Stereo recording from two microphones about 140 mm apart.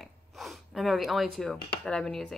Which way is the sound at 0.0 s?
Centre (ahead or behind).